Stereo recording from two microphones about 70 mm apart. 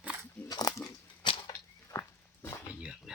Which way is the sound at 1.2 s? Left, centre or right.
Left.